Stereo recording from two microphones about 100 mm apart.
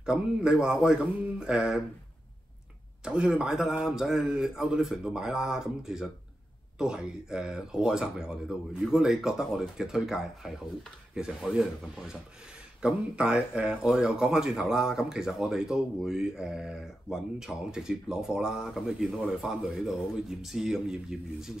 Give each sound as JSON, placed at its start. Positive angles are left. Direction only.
{"t": 0.0, "sound": "speech", "side_deg": -5}
{"t": 3.1, "sound": "speech", "side_deg": -10}